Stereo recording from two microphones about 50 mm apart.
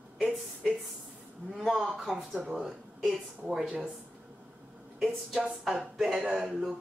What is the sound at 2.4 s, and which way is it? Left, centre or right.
Speech, centre.